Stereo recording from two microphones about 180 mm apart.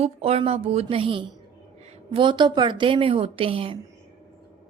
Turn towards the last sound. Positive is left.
turn(degrees=-30)  # may be behind; listen again after turning